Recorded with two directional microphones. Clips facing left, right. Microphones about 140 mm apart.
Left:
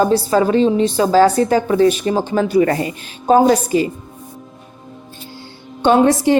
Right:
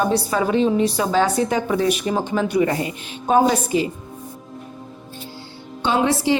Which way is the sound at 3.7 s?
45° left (ahead or behind).